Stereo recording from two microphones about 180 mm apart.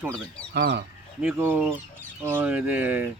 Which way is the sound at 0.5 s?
70° right (ahead or behind).